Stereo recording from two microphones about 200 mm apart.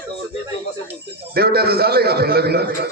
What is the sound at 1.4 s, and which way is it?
A man's voice, 50° right (ahead or behind).